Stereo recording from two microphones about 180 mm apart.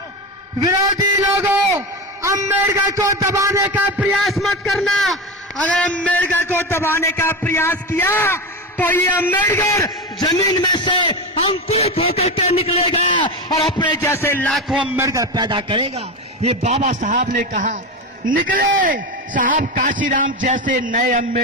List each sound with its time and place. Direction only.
1.2 s a man's voice: 15° right (ahead or behind)
3.9 s a man's voice: centre (ahead or behind)
14.7 s a man's voice: 5° right (ahead or behind)
15.0 s a man's voice: 20° right (ahead or behind); by 21.4 s 45° right (ahead or behind)